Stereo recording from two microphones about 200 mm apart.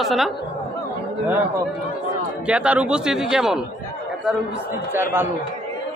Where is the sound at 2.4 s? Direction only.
5° right (ahead or behind).